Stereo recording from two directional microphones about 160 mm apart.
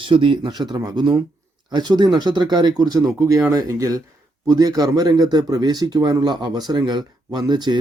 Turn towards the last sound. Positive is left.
turn(degrees=-25)  # may be behind; listen again after turning